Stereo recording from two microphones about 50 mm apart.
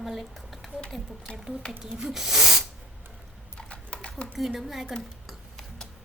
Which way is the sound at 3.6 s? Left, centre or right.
Centre.